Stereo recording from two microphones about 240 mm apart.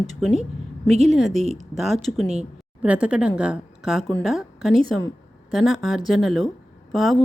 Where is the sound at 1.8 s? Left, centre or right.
Centre.